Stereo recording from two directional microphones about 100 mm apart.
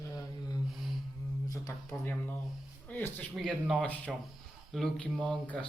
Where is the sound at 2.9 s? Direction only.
20° left (ahead or behind).